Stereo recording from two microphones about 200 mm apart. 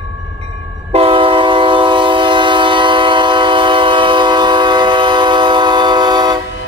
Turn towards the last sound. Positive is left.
turn(degrees=-20)  # may be behind; listen again after turning